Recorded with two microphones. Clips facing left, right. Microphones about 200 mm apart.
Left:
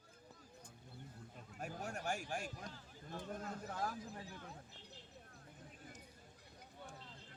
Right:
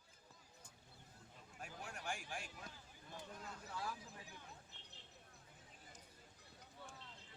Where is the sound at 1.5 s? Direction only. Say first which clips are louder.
Left 7 dB; 45° left (ahead or behind).